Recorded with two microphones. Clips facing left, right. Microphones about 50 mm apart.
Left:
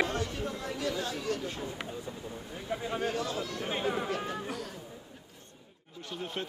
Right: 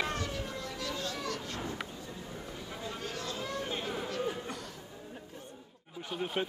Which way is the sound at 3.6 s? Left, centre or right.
Left.